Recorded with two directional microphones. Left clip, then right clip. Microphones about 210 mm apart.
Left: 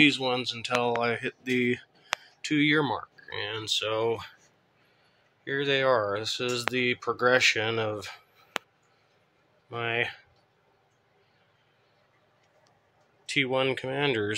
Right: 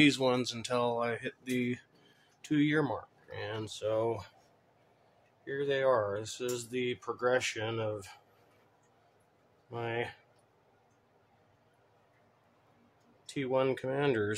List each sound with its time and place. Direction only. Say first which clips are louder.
0.0 s speech: left 4 dB; 25° right (ahead or behind); by 4.3 s centre (ahead or behind)
5.4 s speech: left 5 dB; 5° left (ahead or behind)
9.7 s speech: left 7 dB; centre (ahead or behind)
13.2 s speech: left 5 dB; centre (ahead or behind)